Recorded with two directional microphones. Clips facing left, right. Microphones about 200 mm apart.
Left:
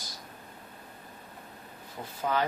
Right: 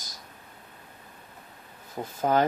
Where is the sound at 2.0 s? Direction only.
45° right (ahead or behind).